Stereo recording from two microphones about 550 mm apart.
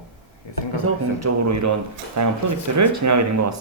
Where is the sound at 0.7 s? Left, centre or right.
Right.